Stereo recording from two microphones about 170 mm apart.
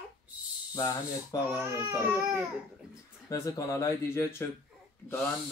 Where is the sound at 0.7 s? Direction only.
20° left (ahead or behind).